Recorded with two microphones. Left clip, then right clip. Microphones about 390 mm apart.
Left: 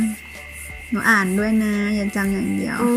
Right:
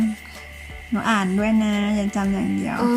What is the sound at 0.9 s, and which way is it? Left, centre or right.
Speech, centre.